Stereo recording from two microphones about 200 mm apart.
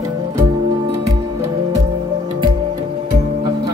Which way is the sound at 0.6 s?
25° right (ahead or behind).